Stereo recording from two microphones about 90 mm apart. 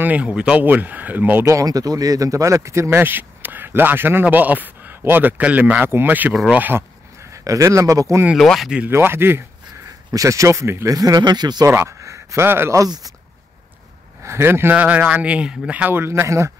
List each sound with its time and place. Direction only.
0.0 s speech: 15° right (ahead or behind)
1.4 s speech: 35° right (ahead or behind); by 6.8 s 20° right (ahead or behind)
7.3 s speech: 35° right (ahead or behind)
8.4 s speech: centre (ahead or behind)
8.9 s speech: 25° right (ahead or behind)
10.1 s speech: 35° right (ahead or behind)
11.0 s speech: 45° right (ahead or behind)
11.6 s speech: 30° right (ahead or behind)
12.8 s speech: 45° right (ahead or behind)
14.2 s speech: 30° right (ahead or behind)